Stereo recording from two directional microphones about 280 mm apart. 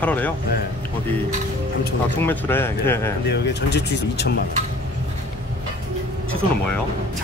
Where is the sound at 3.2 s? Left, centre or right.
Left.